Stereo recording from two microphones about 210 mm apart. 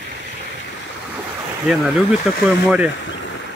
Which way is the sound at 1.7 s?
5° right (ahead or behind).